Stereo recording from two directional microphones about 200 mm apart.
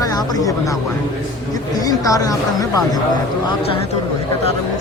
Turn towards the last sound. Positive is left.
turn(degrees=15)  # may be behind; listen again after turning